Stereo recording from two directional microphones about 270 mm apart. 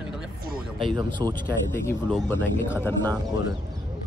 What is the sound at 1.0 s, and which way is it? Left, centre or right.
Speech, centre.